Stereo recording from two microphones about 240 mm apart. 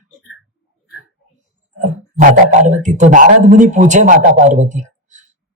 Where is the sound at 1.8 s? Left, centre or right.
Right.